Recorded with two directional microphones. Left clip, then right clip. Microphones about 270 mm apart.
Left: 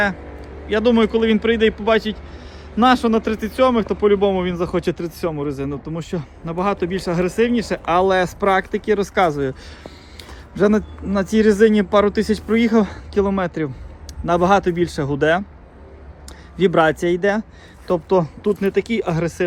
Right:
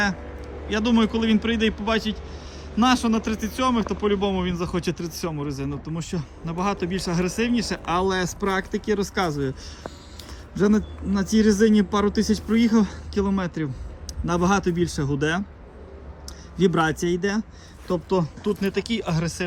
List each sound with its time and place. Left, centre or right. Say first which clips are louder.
0.7 s speech: left 7 dB; centre
10.2 s a sound: left 6 dB; centre
11.3 s speech: left 5 dB; centre
16.6 s speech: left 6 dB; centre